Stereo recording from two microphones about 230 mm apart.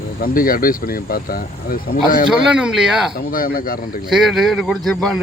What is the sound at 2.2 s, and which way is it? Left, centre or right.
Speech, centre.